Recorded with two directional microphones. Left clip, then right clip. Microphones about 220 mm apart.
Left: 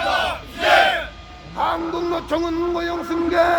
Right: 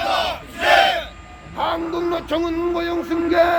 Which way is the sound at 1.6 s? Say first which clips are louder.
Even; 45° right (ahead or behind).